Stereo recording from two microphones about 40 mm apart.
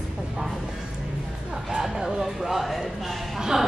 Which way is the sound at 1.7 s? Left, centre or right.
Centre.